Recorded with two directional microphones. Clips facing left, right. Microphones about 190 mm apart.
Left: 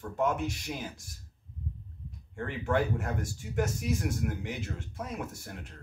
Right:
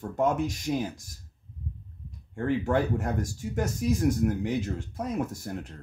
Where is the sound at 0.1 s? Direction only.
40° right (ahead or behind).